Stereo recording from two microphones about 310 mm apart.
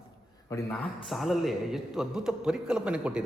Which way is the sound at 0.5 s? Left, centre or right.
Centre.